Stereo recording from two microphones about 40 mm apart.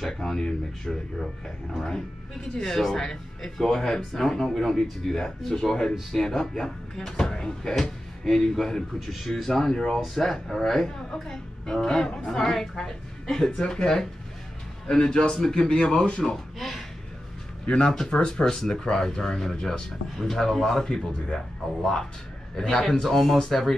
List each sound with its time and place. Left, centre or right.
0.2 s speech: centre
8.3 s speech: centre
13.6 s a man's voice: left
14.9 s a man's voice: centre
16.2 s speech: centre
17.6 s a man's voice: left
20.8 s a man's voice: centre
22.8 s speech: centre